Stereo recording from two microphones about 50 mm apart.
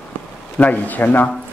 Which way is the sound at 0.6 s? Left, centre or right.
Left.